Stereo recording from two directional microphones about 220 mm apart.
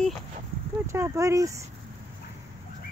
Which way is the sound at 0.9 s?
15° right (ahead or behind).